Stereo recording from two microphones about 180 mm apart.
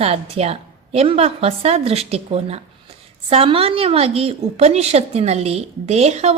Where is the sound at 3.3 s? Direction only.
30° right (ahead or behind).